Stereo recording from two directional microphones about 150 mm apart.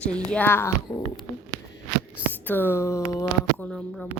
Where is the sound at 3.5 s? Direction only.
10° left (ahead or behind).